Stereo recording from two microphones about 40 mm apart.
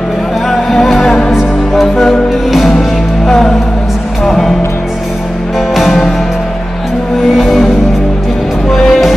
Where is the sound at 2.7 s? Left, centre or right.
Centre.